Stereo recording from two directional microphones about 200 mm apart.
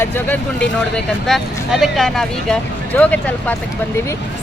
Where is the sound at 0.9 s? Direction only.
Centre (ahead or behind).